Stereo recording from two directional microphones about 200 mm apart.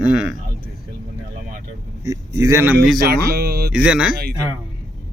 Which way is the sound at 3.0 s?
50° right (ahead or behind).